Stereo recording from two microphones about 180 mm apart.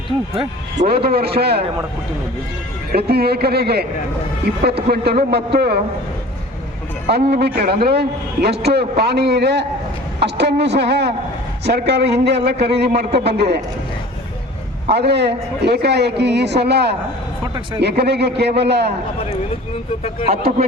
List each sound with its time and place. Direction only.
0.9 s a man's voice: 60° right (ahead or behind)
2.9 s a man's voice: 60° right (ahead or behind)
7.1 s a man's voice: 65° right (ahead or behind)
14.8 s a man's voice: 65° right (ahead or behind)
20.2 s speech: 35° right (ahead or behind)